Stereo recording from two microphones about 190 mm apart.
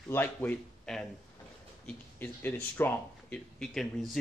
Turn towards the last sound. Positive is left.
turn(degrees=5)  # may be behind; listen again after turning